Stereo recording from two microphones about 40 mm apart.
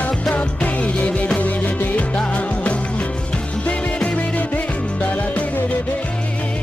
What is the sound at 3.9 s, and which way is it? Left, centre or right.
Music, centre.